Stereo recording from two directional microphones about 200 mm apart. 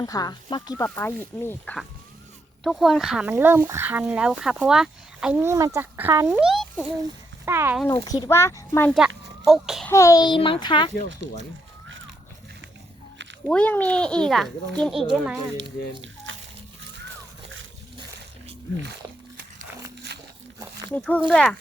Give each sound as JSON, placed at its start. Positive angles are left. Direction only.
{"t": 0.0, "sound": "a child's voice", "side_deg": 20}
{"t": 7.4, "sound": "speech", "side_deg": -10}
{"t": 7.9, "sound": "speech", "side_deg": 20}
{"t": 8.9, "sound": "a child's voice", "side_deg": 0}
{"t": 9.9, "sound": "a child's voice", "side_deg": 15}
{"t": 13.5, "sound": "speech", "side_deg": 5}
{"t": 16.3, "sound": "a sound", "side_deg": -75}
{"t": 20.9, "sound": "speech", "side_deg": 5}